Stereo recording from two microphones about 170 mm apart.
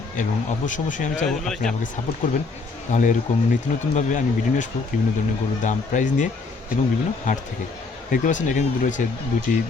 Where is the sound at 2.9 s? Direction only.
50° left (ahead or behind).